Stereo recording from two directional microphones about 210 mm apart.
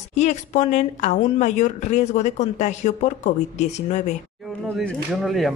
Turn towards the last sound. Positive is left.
turn(degrees=0)  # may be behind; listen again after turning